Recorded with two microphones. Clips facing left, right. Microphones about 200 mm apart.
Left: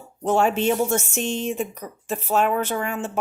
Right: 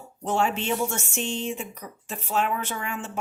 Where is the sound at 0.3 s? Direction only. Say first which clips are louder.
Left 6 dB; 45° left (ahead or behind).